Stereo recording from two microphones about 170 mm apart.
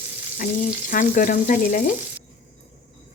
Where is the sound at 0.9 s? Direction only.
50° left (ahead or behind).